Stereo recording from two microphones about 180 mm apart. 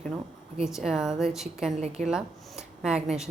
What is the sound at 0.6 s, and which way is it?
A woman's voice, centre (ahead or behind).